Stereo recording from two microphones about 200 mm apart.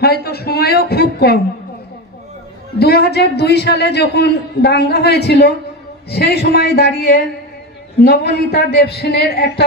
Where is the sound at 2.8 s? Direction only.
55° left (ahead or behind).